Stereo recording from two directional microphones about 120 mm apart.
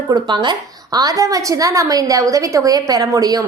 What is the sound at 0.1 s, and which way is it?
A woman's voice, 40° right (ahead or behind).